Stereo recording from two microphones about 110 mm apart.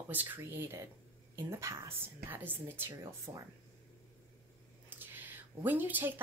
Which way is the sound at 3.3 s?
30° right (ahead or behind).